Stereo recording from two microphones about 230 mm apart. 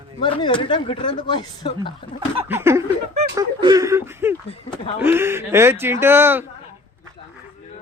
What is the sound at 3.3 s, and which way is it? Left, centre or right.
Speech, centre.